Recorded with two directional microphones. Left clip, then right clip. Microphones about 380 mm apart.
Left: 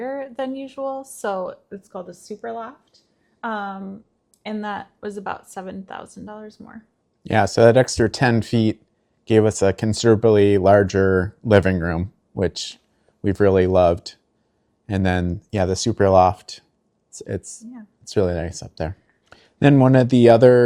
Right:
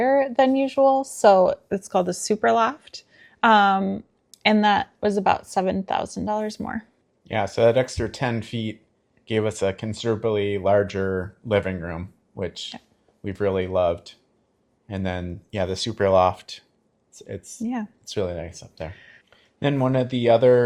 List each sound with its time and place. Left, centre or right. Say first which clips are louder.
0.0 s a woman's voice: right 9 dB; centre
7.3 s speech: left 5 dB; left